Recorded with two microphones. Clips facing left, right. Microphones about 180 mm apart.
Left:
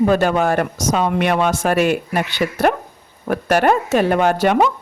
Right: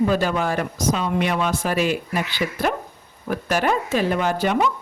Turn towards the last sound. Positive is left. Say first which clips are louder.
# left 5 dB
turn(degrees=65)  # may be behind; listen again after turning